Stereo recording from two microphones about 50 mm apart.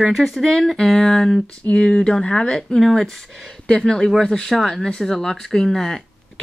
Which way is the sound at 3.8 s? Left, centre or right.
Centre.